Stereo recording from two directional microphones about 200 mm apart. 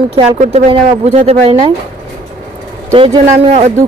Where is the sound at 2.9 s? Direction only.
25° right (ahead or behind).